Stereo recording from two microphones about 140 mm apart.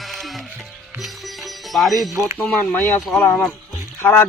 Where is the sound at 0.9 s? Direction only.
Centre (ahead or behind).